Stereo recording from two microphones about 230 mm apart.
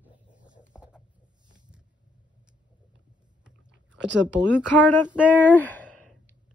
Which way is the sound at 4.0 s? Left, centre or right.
Right.